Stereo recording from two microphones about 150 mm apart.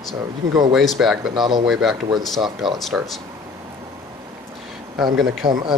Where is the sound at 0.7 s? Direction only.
Centre (ahead or behind).